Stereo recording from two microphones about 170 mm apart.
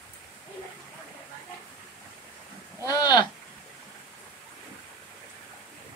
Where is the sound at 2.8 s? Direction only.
20° left (ahead or behind).